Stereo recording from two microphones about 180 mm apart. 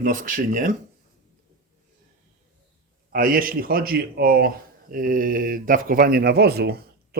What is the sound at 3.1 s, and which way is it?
A man's voice, 55° right (ahead or behind).